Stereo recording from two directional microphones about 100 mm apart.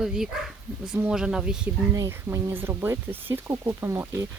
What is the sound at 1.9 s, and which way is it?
Speech, 30° right (ahead or behind).